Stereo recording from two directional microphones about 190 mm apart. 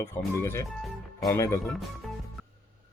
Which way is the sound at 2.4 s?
Centre (ahead or behind).